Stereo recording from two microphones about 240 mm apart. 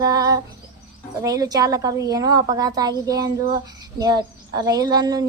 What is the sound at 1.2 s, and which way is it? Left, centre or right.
Speech, centre.